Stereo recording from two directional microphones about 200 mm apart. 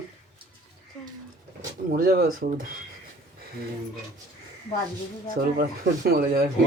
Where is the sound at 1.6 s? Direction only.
45° right (ahead or behind).